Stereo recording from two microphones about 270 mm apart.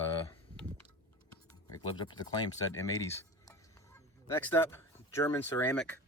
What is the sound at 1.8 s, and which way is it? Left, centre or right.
Speech, centre.